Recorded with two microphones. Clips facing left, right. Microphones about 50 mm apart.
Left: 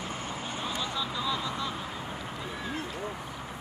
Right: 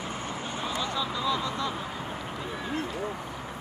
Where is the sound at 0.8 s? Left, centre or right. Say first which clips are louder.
Right 4 dB; centre.